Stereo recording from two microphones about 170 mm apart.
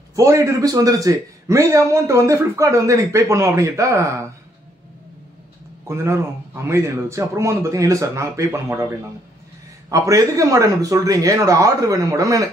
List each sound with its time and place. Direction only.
0.1 s a man's voice: 15° right (ahead or behind)
5.9 s a man's voice: 15° right (ahead or behind)
9.8 s a man's voice: 20° right (ahead or behind)